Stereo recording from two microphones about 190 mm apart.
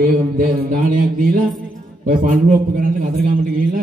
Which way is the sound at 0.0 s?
50° right (ahead or behind).